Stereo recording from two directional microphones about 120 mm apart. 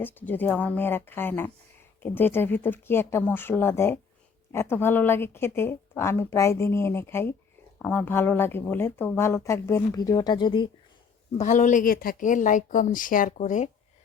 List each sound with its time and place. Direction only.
0.0 s speech: 15° left (ahead or behind); by 10.7 s 40° left (ahead or behind)
11.3 s a woman's voice: 90° left